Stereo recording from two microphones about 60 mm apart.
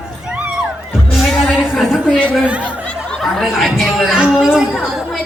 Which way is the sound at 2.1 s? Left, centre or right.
Left.